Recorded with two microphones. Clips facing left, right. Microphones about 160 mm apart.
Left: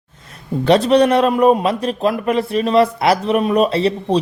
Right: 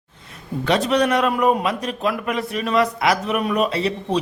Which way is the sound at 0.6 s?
35° left (ahead or behind).